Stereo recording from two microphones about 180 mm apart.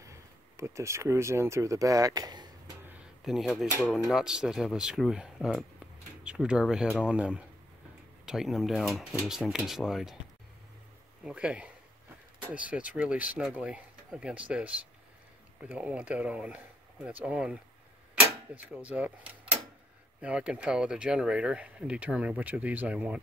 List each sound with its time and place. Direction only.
0.0 s speech: 15° right (ahead or behind)
3.3 s speech: centre (ahead or behind)
11.2 s speech: 5° right (ahead or behind)
18.2 s a sound: 10° right (ahead or behind)
20.2 s speech: 5° right (ahead or behind)